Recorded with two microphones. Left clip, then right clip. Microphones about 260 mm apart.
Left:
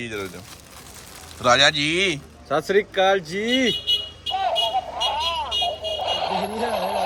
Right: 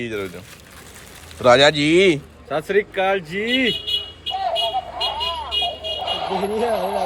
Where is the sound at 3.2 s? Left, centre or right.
Left.